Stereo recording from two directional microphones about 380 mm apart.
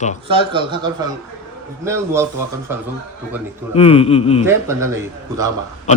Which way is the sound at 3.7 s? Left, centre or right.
Centre.